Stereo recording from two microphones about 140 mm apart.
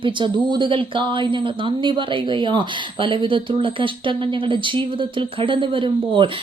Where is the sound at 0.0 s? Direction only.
35° right (ahead or behind).